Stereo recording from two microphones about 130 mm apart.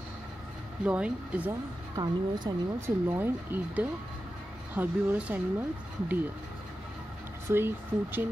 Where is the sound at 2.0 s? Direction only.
30° right (ahead or behind).